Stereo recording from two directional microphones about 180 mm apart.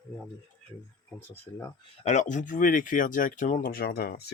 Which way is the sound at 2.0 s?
40° left (ahead or behind).